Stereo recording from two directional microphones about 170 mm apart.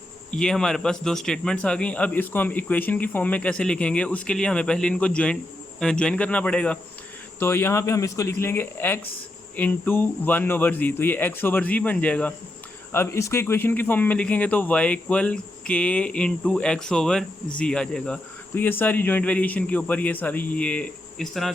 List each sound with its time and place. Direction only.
0.3 s speech: 5° left (ahead or behind)